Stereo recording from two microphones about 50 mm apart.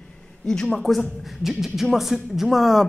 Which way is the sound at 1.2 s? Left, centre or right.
Centre.